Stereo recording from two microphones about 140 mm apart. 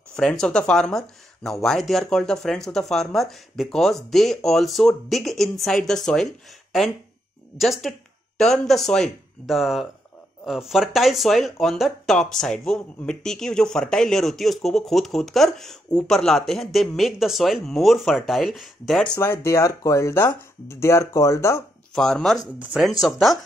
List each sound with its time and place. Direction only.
0.1 s speech: 5° left (ahead or behind)
7.5 s speech: centre (ahead or behind)
19.1 s speech: 15° left (ahead or behind)
21.9 s speech: 5° left (ahead or behind)